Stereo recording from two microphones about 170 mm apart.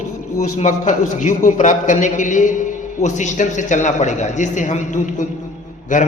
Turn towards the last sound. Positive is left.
turn(degrees=50)  # may be behind; listen again after turning